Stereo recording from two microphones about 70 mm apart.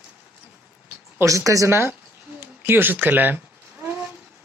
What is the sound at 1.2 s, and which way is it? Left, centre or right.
Speech, right.